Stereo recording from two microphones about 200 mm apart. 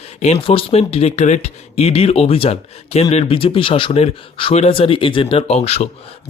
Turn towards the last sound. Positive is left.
turn(degrees=30)  # may be behind; listen again after turning